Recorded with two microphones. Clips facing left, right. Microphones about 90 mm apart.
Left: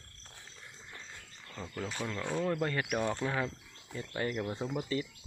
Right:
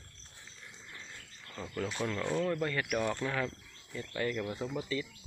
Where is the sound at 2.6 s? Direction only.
30° left (ahead or behind).